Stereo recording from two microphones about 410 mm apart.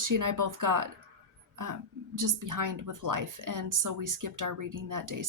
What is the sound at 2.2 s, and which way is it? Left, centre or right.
Speech, right.